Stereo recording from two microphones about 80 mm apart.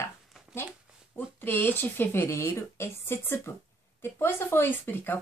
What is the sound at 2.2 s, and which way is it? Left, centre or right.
Speech, left.